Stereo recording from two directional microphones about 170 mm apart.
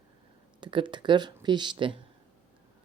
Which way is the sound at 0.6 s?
30° right (ahead or behind).